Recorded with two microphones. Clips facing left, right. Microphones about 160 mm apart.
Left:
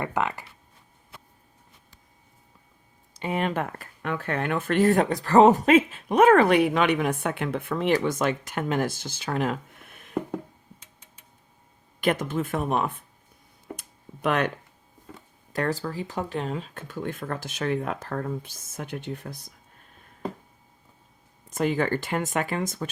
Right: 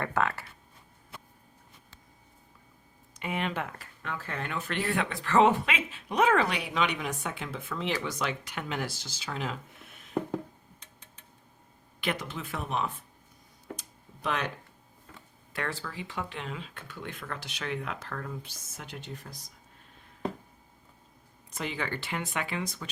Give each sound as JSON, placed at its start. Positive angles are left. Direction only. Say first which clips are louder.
{"t": 0.0, "sound": "speech", "louder": "left 2 dB", "side_deg": 15}
{"t": 3.2, "sound": "speech", "louder": "left 6 dB", "side_deg": 40}
{"t": 11.9, "sound": "speech", "louder": "left 9 dB", "side_deg": 45}
{"t": 13.7, "sound": "tick-tock", "louder": "left 4 dB", "side_deg": 60}
{"t": 15.5, "sound": "speech", "louder": "left 8 dB", "side_deg": 40}
{"t": 21.5, "sound": "speech", "louder": "left 10 dB", "side_deg": 45}